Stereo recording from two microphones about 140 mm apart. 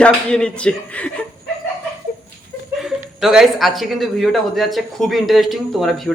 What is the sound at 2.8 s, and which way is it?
Speech, 5° right (ahead or behind).